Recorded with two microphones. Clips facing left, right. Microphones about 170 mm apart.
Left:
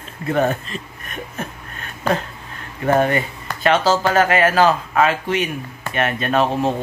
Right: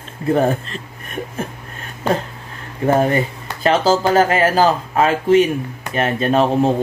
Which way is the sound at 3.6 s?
30° right (ahead or behind).